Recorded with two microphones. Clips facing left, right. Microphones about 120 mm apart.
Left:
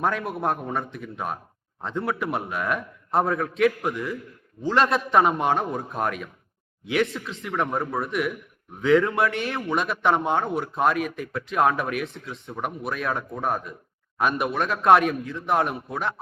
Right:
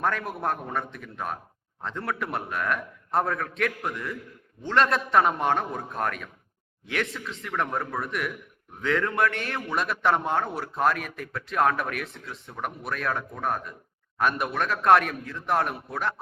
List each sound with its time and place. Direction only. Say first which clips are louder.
0.0 s speech: left 2 dB; 5° left (ahead or behind)
7.7 s a man's voice: left 3 dB; 25° left (ahead or behind)
8.0 s speech: left 5 dB; centre (ahead or behind)